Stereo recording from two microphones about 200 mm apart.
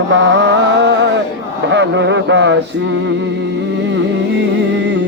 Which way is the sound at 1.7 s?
65° right (ahead or behind).